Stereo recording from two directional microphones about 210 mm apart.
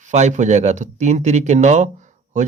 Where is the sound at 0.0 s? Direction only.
35° right (ahead or behind).